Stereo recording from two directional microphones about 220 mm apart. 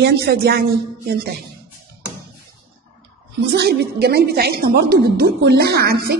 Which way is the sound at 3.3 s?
50° right (ahead or behind).